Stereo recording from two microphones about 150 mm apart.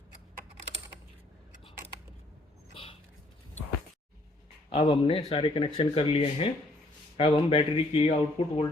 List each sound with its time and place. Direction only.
4.7 s speech: 35° left (ahead or behind)